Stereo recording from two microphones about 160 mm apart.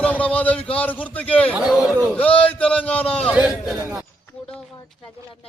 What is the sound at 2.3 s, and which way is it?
Speech, 35° left (ahead or behind).